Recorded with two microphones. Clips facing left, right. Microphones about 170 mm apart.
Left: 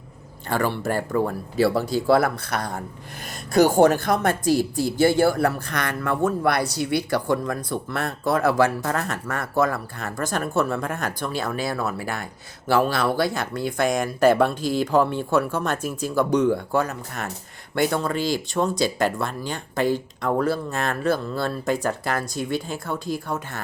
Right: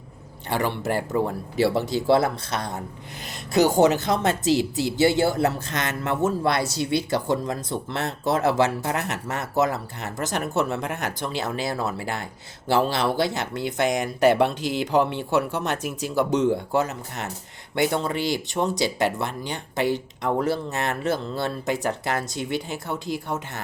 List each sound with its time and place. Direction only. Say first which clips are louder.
0.6 s speech: left 1 dB; 20° right (ahead or behind)